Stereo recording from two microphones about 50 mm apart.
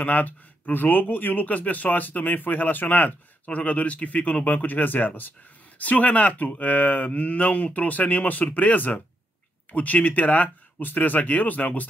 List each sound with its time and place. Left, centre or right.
0.0 s speech: left